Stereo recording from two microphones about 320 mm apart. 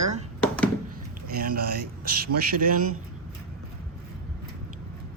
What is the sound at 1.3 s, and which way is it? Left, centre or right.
A man's voice, right.